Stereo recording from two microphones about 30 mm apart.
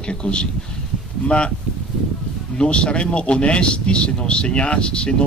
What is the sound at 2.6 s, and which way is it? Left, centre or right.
Speech, left.